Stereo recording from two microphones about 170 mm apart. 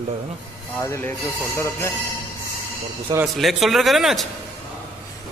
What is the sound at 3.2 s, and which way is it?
A man's voice, centre (ahead or behind).